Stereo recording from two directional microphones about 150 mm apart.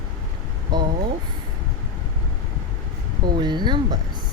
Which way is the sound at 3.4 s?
30° right (ahead or behind).